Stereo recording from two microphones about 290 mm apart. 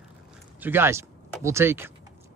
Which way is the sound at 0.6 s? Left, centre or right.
Centre.